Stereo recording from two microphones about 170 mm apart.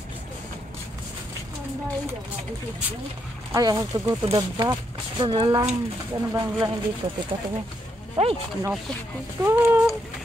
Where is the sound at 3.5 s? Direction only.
20° right (ahead or behind).